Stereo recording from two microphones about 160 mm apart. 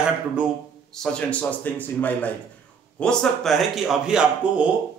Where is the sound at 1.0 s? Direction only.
5° left (ahead or behind).